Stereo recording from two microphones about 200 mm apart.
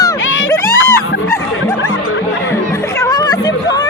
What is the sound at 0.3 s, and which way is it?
Music, 80° left.